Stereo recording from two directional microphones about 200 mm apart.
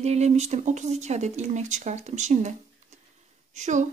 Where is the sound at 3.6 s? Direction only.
35° right (ahead or behind).